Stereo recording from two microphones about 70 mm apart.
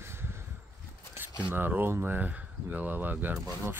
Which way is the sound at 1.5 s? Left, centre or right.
Right.